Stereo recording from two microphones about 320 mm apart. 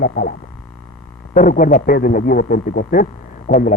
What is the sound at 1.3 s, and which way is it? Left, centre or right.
Speech, left.